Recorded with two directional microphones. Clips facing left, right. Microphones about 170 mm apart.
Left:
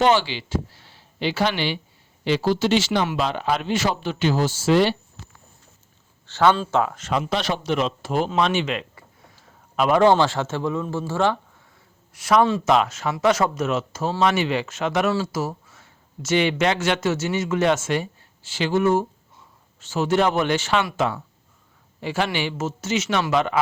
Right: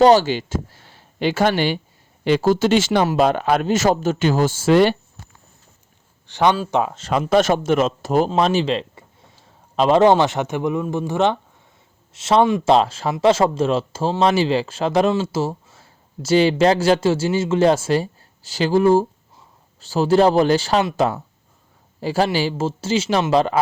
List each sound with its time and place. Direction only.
0.0 s speech: 40° right (ahead or behind)
6.2 s speech: 15° right (ahead or behind)
7.1 s a man's voice: 50° right (ahead or behind); by 23.6 s 35° right (ahead or behind)